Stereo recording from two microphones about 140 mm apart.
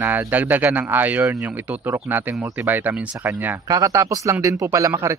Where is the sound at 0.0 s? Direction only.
15° right (ahead or behind).